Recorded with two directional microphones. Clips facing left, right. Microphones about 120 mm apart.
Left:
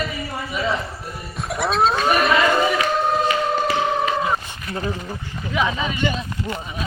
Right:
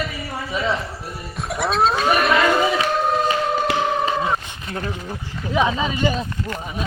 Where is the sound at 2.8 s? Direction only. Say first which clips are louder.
Even; centre (ahead or behind).